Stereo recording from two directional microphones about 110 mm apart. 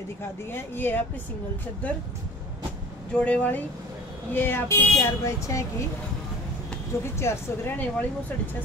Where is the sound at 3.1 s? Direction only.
10° left (ahead or behind); by 5.6 s 30° left (ahead or behind).